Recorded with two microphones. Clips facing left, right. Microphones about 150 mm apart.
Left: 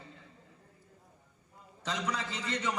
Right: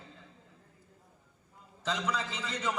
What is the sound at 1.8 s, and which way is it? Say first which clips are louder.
Speech: right 2 dB; centre (ahead or behind).